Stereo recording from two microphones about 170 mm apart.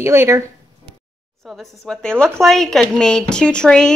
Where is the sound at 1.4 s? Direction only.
Centre (ahead or behind).